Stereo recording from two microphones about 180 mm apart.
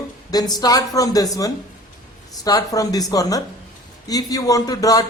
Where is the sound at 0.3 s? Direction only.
20° left (ahead or behind).